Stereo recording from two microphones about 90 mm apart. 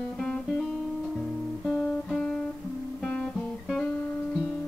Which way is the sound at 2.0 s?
5° left (ahead or behind).